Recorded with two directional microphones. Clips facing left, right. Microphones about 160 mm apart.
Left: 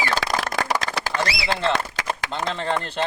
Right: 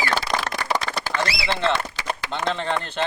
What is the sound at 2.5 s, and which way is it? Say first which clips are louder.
Speech: left 1 dB; 35° left (ahead or behind).